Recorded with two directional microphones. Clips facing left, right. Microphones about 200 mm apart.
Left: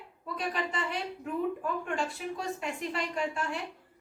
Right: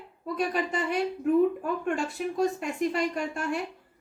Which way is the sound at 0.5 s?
45° right (ahead or behind).